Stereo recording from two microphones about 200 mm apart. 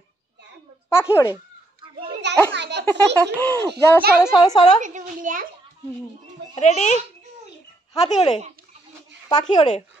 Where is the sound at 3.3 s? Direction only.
10° left (ahead or behind).